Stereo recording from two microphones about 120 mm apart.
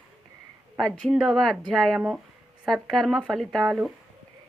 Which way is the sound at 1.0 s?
Centre (ahead or behind).